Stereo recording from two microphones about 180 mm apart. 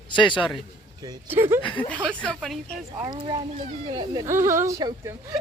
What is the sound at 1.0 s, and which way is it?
Speech, 20° right (ahead or behind).